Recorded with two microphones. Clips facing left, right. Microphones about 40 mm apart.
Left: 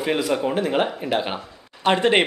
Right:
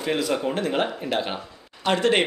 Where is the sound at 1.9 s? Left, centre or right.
Left.